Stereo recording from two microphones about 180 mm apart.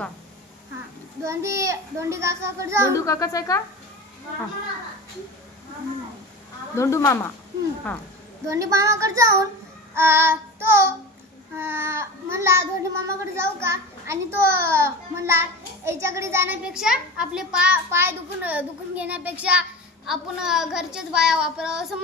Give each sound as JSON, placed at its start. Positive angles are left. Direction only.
{"t": 1.2, "sound": "a child's voice", "side_deg": -15}
{"t": 2.9, "sound": "speech", "side_deg": 20}
{"t": 6.7, "sound": "speech", "side_deg": 15}
{"t": 8.5, "sound": "a child's voice", "side_deg": -15}
{"t": 9.9, "sound": "child singing", "side_deg": -15}
{"t": 11.5, "sound": "a child's voice", "side_deg": -15}
{"t": 20.1, "sound": "child singing", "side_deg": -5}